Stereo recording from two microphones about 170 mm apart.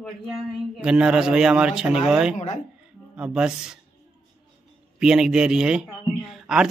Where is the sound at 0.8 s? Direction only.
5° right (ahead or behind).